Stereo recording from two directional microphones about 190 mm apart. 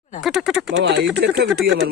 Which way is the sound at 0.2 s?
Centre (ahead or behind).